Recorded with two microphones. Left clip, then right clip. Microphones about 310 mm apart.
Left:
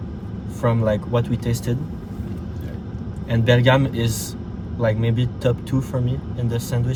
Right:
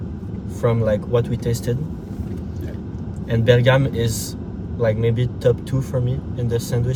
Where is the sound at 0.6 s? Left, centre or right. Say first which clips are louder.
Right 1 dB; centre.